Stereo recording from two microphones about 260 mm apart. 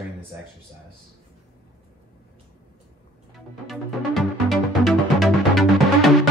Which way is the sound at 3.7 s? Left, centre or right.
Centre.